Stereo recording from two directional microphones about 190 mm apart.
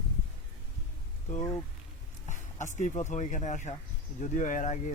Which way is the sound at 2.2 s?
40° left (ahead or behind).